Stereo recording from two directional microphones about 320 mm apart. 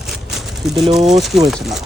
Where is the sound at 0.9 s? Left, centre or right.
Centre.